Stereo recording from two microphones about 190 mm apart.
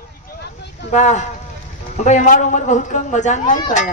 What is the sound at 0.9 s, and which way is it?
A man's voice, 40° left (ahead or behind).